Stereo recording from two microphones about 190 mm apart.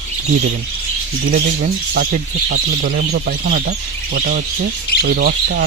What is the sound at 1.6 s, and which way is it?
Speech, 50° right (ahead or behind).